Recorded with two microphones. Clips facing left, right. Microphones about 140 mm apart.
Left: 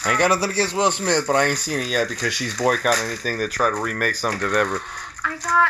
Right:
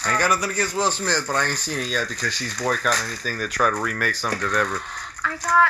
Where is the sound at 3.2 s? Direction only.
45° left (ahead or behind).